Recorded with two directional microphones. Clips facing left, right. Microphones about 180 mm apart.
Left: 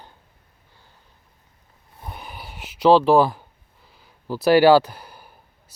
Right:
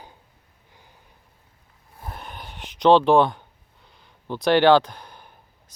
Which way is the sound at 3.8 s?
5° left (ahead or behind).